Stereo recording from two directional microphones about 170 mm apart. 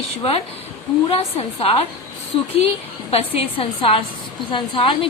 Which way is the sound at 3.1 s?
35° left (ahead or behind).